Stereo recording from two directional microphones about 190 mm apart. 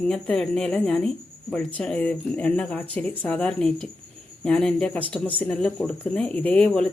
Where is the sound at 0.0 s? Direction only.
5° left (ahead or behind).